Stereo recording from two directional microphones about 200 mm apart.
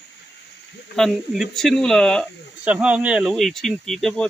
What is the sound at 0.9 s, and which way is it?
Speech, centre (ahead or behind).